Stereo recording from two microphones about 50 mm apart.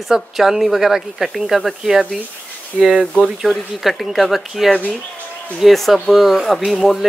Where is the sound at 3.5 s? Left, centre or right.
Centre.